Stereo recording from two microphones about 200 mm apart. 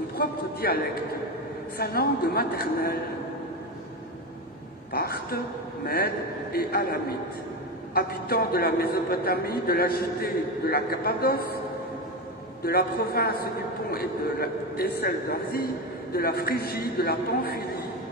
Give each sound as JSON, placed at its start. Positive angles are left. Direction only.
{"t": 0.6, "sound": "a man's voice", "side_deg": 50}
{"t": 4.9, "sound": "a man's voice", "side_deg": 50}
{"t": 12.6, "sound": "a man's voice", "side_deg": 50}